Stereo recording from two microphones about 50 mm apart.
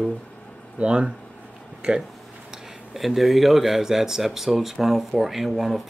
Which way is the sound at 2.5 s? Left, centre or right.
Centre.